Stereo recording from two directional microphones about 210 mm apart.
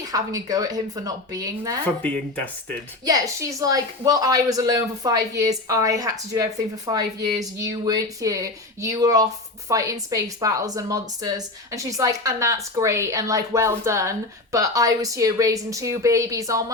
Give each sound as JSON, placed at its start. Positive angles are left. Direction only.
{"t": 0.0, "sound": "speech", "side_deg": -15}
{"t": 2.0, "sound": "speech", "side_deg": 5}
{"t": 3.0, "sound": "speech", "side_deg": -15}